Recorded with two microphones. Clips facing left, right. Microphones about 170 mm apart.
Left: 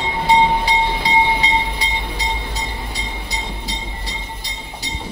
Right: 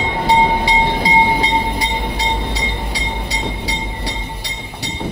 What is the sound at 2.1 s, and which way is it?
Vehicle, 75° right (ahead or behind).